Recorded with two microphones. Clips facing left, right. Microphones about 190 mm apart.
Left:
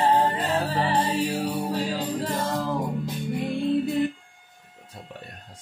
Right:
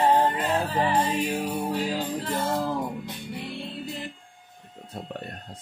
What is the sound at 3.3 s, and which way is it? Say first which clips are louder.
Music: left 13 dB; 50° left (ahead or behind).